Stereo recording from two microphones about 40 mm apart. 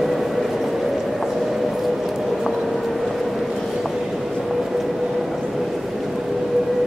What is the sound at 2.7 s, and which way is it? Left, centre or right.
Vehicle, centre.